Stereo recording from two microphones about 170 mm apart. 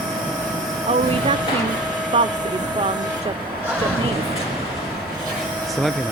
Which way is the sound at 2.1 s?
30° right (ahead or behind).